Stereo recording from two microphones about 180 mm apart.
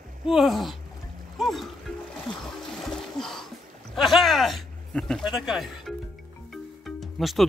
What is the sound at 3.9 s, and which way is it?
Speech, centre (ahead or behind).